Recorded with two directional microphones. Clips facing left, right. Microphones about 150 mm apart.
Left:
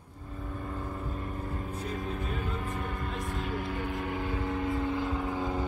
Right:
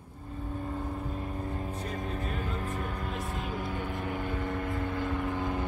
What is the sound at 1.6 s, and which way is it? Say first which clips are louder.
Vehicle: even; 40° right (ahead or behind).